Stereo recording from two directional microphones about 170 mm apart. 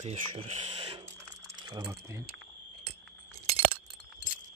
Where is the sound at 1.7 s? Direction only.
20° right (ahead or behind).